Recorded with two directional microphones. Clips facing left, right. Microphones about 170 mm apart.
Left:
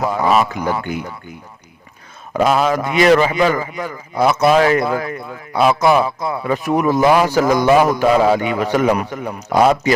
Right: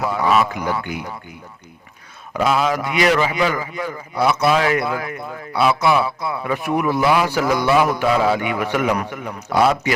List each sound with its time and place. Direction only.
0.0 s a man's voice: 40° left (ahead or behind)
0.6 s a man's voice: 50° left (ahead or behind)
2.3 s a man's voice: 45° left (ahead or behind)